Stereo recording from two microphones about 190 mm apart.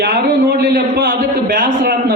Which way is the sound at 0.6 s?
55° right (ahead or behind).